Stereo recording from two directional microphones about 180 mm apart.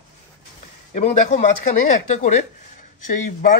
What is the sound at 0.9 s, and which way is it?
Speech, 40° left (ahead or behind).